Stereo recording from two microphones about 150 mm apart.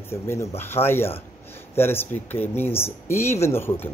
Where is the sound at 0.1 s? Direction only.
15° left (ahead or behind).